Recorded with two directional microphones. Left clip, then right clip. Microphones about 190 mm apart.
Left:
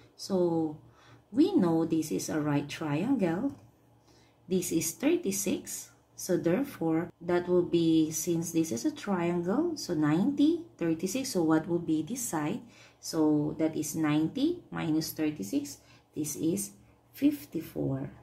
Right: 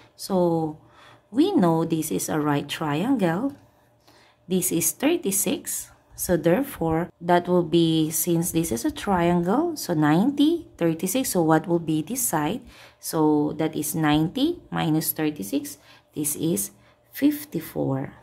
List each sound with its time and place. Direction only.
0.2 s speech: 45° right (ahead or behind)
4.5 s speech: 40° right (ahead or behind)